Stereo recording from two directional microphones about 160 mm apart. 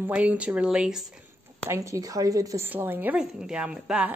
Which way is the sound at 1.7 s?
20° right (ahead or behind).